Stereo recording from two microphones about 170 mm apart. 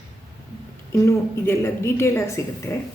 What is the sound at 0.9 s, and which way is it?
A woman's voice, 15° left (ahead or behind).